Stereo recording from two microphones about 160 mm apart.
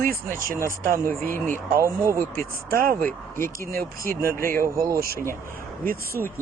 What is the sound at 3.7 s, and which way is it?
Speech, 65° right (ahead or behind).